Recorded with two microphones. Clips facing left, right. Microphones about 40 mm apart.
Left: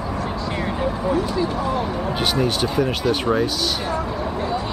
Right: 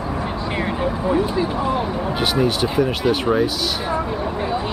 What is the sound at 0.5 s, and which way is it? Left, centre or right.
Speech, centre.